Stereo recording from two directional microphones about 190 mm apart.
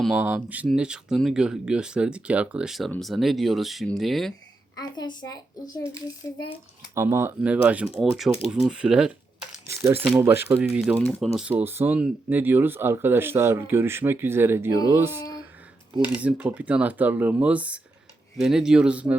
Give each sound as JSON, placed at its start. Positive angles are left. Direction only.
{"t": 0.0, "sound": "speech", "side_deg": -5}
{"t": 4.8, "sound": "a child's voice", "side_deg": 20}
{"t": 6.9, "sound": "speech", "side_deg": -15}
{"t": 10.9, "sound": "speech", "side_deg": 5}